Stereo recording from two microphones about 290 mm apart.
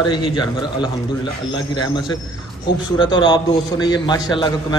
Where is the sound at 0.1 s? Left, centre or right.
Centre.